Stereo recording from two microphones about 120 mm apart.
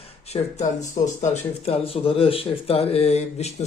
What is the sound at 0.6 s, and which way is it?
Speech, 85° left.